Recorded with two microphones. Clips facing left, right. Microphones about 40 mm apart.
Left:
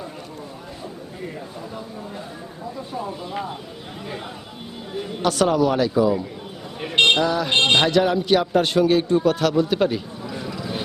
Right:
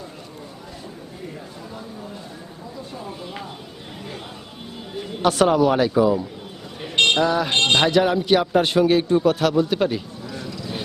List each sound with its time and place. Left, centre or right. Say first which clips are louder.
5.2 s speech: right 2 dB; right
6.8 s speech: left 2 dB; centre
7.2 s a man's voice: right 1 dB; centre
7.5 s speech: left 3 dB; centre
7.9 s a man's voice: right 1 dB; centre
10.2 s a sound: left 2 dB; centre